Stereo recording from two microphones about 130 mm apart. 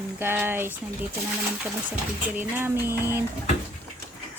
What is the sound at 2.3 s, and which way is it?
Speech, 15° right (ahead or behind).